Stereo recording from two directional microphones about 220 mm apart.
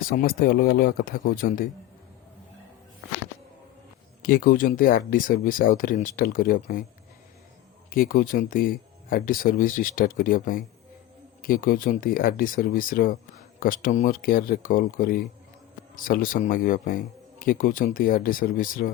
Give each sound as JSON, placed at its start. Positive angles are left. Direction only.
{"t": 0.1, "sound": "speech", "side_deg": 40}
{"t": 4.2, "sound": "speech", "side_deg": 40}
{"t": 7.9, "sound": "speech", "side_deg": 40}